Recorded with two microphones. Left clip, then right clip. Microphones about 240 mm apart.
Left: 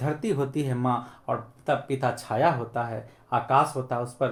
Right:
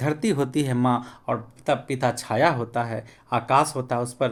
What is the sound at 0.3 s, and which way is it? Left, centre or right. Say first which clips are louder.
Speech: right 3 dB; right.